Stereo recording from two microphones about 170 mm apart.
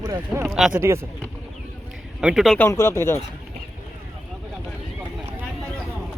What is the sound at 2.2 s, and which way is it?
Speech, centre (ahead or behind).